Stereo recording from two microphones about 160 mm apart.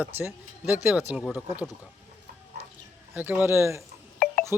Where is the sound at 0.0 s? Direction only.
15° right (ahead or behind).